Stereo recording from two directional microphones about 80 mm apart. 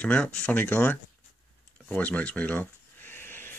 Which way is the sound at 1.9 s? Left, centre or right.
Centre.